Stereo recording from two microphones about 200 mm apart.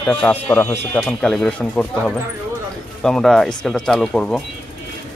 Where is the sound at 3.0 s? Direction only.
Centre (ahead or behind).